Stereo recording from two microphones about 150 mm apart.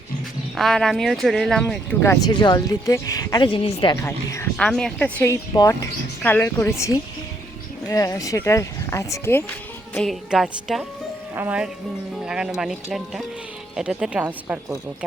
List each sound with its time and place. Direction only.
0.5 s speech: centre (ahead or behind)
2.0 s speech: 30° left (ahead or behind)
4.0 s speech: 15° left (ahead or behind)
4.5 s speech: 5° left (ahead or behind)
5.3 s speech: 20° left (ahead or behind)
9.9 s a woman's voice: 5° left (ahead or behind); by 14.6 s 10° right (ahead or behind)